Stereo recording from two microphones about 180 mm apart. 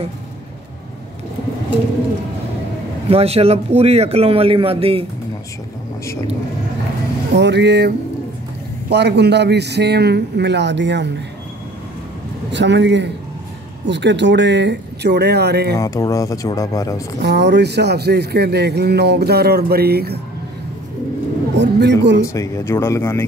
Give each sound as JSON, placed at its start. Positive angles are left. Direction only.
{"t": 3.1, "sound": "a man's voice", "side_deg": -35}
{"t": 7.3, "sound": "a man's voice", "side_deg": -70}
{"t": 12.5, "sound": "a man's voice", "side_deg": -75}
{"t": 15.8, "sound": "speech", "side_deg": 20}
{"t": 17.2, "sound": "speech", "side_deg": -70}
{"t": 21.5, "sound": "speech", "side_deg": -70}
{"t": 22.2, "sound": "speech", "side_deg": 15}